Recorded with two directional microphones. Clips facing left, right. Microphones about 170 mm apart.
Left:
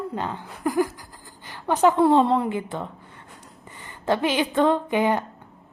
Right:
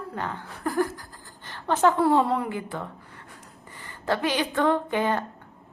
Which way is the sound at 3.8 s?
20° left (ahead or behind).